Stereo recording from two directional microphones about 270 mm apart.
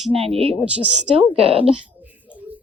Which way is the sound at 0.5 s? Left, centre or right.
Centre.